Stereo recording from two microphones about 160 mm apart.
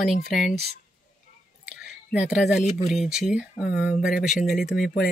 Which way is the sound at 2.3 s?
Centre (ahead or behind).